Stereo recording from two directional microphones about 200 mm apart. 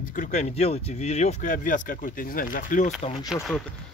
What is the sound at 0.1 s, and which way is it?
Speech, 40° left (ahead or behind).